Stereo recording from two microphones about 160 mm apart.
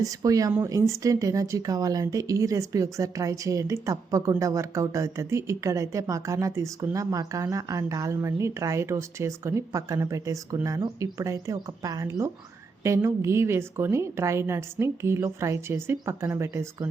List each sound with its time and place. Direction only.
0.0 s a woman's voice: 20° right (ahead or behind)